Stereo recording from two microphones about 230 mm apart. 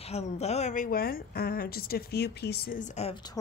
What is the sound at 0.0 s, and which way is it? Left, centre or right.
A woman's voice, left.